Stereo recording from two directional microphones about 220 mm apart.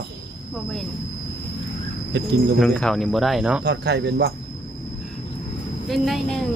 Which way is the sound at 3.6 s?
50° right (ahead or behind).